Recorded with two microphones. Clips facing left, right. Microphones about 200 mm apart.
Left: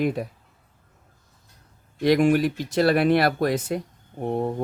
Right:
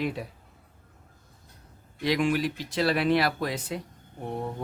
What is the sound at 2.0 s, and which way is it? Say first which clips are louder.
Speech: left 7 dB; 50° left (ahead or behind).